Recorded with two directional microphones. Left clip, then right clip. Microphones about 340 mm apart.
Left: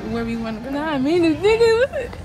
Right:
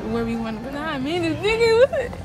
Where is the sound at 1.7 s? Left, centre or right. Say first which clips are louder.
Right 1 dB; centre.